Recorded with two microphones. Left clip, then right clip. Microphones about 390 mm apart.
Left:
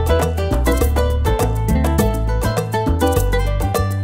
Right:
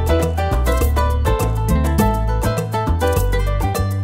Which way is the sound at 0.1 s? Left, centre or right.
Left.